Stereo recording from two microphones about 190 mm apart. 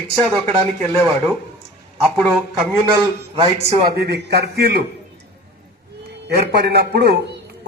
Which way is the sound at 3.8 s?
55° right (ahead or behind).